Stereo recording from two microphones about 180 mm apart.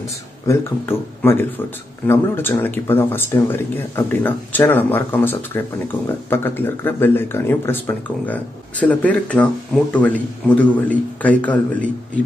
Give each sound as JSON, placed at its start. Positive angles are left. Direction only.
{"t": 0.5, "sound": "speech", "side_deg": 15}